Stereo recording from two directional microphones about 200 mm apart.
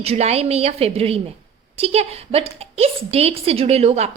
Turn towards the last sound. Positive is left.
turn(degrees=-30)  # may be behind; listen again after turning